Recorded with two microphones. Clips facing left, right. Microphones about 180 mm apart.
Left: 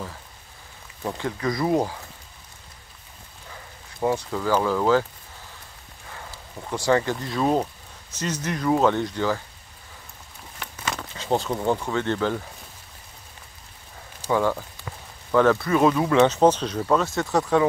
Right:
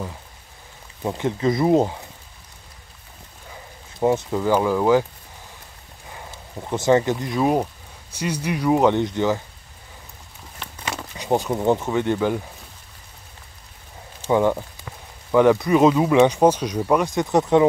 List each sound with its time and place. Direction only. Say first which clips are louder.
1.0 s speech: right 5 dB; 20° right (ahead or behind)
4.0 s speech: right 4 dB; 20° right (ahead or behind)
6.0 s speech: right 2 dB; 20° right (ahead or behind)
11.0 s speech: right 3 dB; 15° right (ahead or behind)
14.3 s speech: right 4 dB; 20° right (ahead or behind)